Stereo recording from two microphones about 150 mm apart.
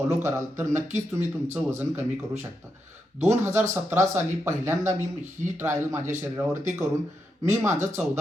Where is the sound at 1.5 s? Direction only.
15° right (ahead or behind).